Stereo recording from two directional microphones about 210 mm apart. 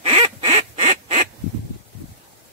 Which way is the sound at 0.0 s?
30° right (ahead or behind).